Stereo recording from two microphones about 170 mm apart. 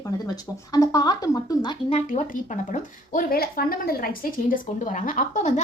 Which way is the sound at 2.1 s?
50° left (ahead or behind).